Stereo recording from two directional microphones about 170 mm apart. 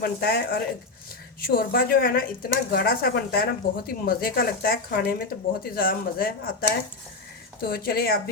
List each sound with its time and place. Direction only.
0.0 s speech: 65° left (ahead or behind)